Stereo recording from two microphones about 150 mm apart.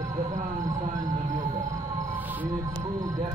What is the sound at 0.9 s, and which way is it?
Speech, 55° right (ahead or behind).